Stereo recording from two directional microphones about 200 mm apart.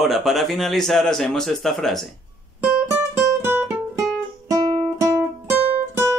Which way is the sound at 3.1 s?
10° right (ahead or behind).